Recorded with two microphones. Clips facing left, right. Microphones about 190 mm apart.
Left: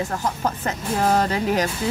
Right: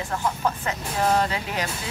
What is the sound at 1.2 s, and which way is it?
Speech, 45° left (ahead or behind).